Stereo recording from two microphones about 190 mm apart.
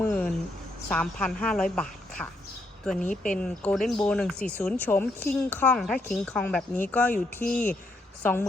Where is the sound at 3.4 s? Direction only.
5° left (ahead or behind).